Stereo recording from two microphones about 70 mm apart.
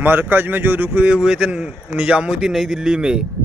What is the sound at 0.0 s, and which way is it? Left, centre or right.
A man's voice, right.